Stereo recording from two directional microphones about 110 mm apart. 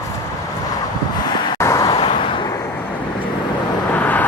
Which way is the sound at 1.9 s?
55° left (ahead or behind).